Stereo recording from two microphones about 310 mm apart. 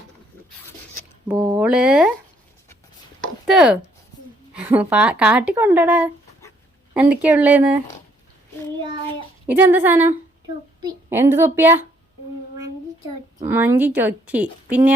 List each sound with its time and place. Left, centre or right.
1.3 s speech: centre
3.2 s a sound: centre
4.5 s speech: centre
9.5 s a woman's voice: centre
13.4 s a woman's voice: centre